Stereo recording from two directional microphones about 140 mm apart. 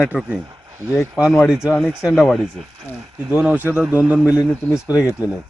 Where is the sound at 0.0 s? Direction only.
10° right (ahead or behind).